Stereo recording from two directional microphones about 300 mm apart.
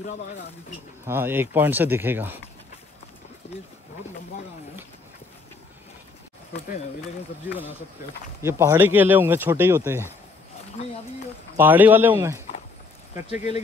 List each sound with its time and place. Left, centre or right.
1.0 s speech: centre
3.4 s speech: left
8.4 s speech: centre
11.5 s speech: centre
13.3 s speech: left